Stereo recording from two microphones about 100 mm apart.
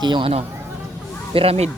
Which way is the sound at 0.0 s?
50° right (ahead or behind).